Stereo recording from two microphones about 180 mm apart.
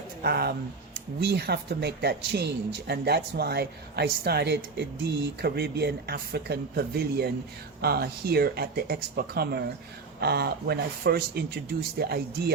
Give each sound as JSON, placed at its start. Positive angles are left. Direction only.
{"t": 0.2, "sound": "speech", "side_deg": -60}